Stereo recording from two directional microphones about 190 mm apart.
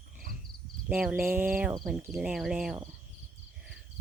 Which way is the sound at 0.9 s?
10° right (ahead or behind).